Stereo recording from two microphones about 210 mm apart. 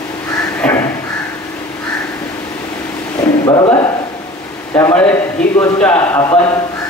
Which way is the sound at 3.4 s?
20° left (ahead or behind).